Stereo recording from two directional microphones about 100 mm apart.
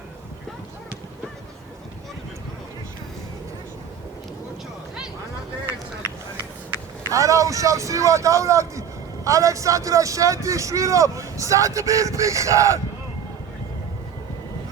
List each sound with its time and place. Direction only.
7.1 s speech: 35° right (ahead or behind)